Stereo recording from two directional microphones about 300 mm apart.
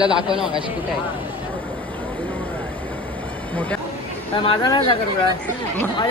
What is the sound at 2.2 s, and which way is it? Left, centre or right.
Vehicle, centre.